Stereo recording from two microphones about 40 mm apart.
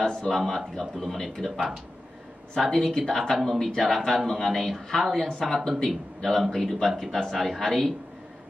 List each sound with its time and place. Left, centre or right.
0.0 s speech: centre
0.9 s speech: centre